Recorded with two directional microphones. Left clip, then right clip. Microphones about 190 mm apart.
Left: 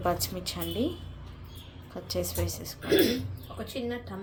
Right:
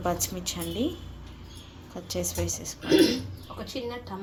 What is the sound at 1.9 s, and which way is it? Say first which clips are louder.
Speech: right 1 dB; centre (ahead or behind).